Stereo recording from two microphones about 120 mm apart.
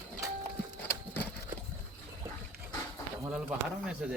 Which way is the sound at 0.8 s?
15° left (ahead or behind).